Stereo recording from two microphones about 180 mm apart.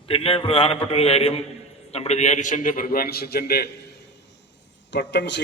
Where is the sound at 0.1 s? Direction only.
30° left (ahead or behind); by 3.7 s 60° left (ahead or behind).